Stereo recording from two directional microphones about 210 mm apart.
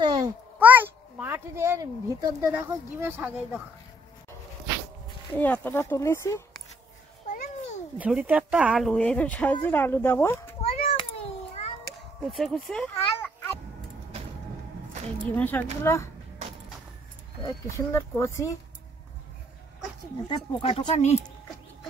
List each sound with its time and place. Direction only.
0.0 s a sound: 20° right (ahead or behind)
0.6 s a child's voice: 10° right (ahead or behind)
5.3 s speech: 10° left (ahead or behind)
7.2 s babbling: 40° left (ahead or behind)
8.0 s speech: 5° right (ahead or behind); by 10.5 s 10° left (ahead or behind)
10.6 s a sound: 30° left (ahead or behind)
12.3 s speech: centre (ahead or behind)
15.3 s speech: 10° left (ahead or behind)
17.6 s speech: 15° left (ahead or behind)
20.2 s speech: 25° left (ahead or behind)